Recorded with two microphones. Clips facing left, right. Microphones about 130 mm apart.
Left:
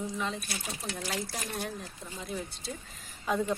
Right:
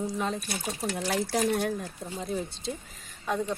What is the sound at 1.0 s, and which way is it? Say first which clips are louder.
Speech: right 10 dB; 60° right (ahead or behind).